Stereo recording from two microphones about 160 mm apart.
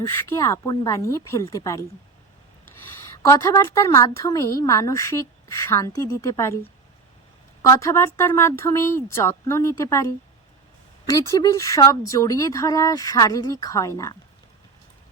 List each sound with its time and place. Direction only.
0.0 s a woman's voice: 20° left (ahead or behind)
3.2 s a woman's voice: 20° left (ahead or behind)
7.6 s a woman's voice: 20° left (ahead or behind)